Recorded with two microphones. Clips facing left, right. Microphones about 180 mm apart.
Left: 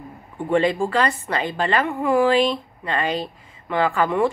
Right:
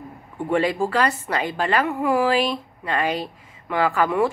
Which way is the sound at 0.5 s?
10° right (ahead or behind).